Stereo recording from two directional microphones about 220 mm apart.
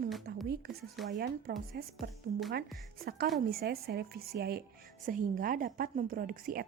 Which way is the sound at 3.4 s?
45° right (ahead or behind).